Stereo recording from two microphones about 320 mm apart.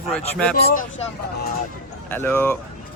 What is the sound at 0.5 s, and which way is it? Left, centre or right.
Speech, left.